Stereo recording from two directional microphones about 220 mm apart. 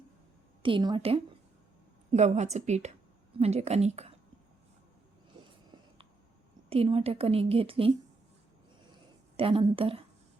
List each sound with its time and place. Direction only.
0.6 s a woman's voice: 20° right (ahead or behind)
6.7 s a woman's voice: 25° right (ahead or behind)
9.4 s a woman's voice: 25° right (ahead or behind)